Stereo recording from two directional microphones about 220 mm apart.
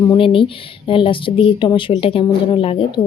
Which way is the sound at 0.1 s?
25° left (ahead or behind).